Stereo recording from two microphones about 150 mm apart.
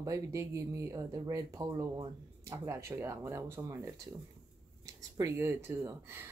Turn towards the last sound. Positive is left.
turn(degrees=-15)  # may be behind; listen again after turning